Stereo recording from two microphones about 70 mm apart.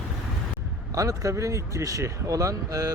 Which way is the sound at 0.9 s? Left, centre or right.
Right.